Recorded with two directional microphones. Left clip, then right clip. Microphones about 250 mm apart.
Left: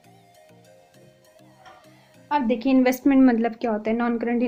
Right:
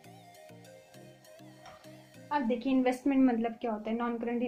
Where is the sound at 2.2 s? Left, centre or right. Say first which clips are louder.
Left 9 dB; left.